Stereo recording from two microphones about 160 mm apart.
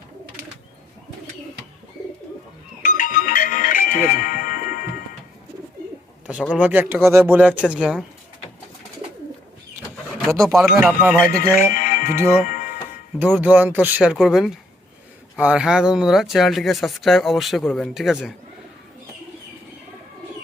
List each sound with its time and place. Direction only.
2.8 s music: 55° left (ahead or behind)
6.5 s speech: 10° right (ahead or behind)
10.8 s speech: 5° right (ahead or behind)
11.5 s music: 60° left (ahead or behind)
12.4 s speech: 55° left (ahead or behind)
13.1 s speech: 10° right (ahead or behind)